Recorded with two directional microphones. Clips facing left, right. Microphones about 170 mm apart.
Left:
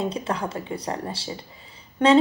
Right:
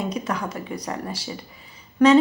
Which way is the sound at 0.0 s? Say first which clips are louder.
Even; 30° left (ahead or behind).